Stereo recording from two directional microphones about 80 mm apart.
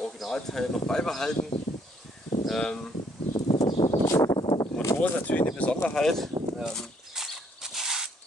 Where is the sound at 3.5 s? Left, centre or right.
Left.